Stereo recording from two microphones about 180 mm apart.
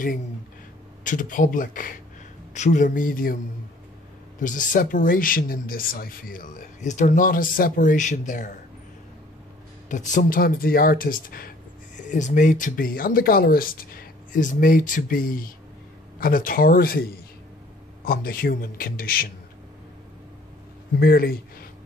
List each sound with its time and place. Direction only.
1.0 s speech: 45° left (ahead or behind)
4.4 s speech: 45° left (ahead or behind)
9.8 s a man's voice: 45° left (ahead or behind)
21.0 s a man's voice: 55° left (ahead or behind)